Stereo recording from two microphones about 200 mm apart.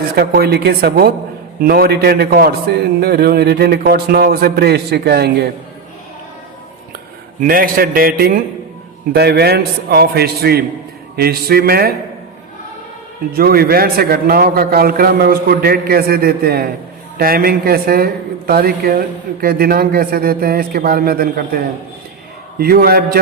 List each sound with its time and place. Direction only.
0.2 s speech: 50° right (ahead or behind)
7.4 s speech: 45° right (ahead or behind)
13.3 s speech: 50° right (ahead or behind)